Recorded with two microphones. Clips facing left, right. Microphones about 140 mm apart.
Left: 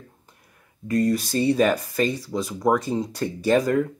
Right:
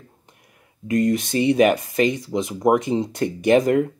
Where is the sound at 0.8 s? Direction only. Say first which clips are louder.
Right 2 dB; 20° right (ahead or behind).